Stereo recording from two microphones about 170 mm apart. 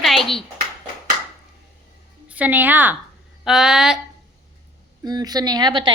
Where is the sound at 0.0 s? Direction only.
Centre (ahead or behind).